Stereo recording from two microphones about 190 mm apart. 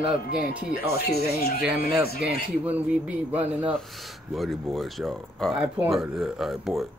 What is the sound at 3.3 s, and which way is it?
Speech, 10° right (ahead or behind).